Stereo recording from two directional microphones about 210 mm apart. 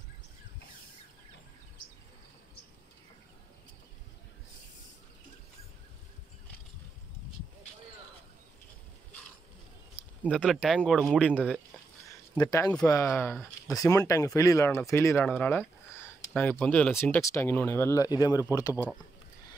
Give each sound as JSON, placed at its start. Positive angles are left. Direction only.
{"t": 10.2, "sound": "speech", "side_deg": 0}
{"t": 12.1, "sound": "a sound", "side_deg": 15}
{"t": 12.8, "sound": "speech", "side_deg": 10}